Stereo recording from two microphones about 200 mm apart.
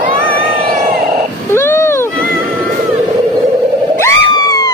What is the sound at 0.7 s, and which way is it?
Music, 40° right (ahead or behind).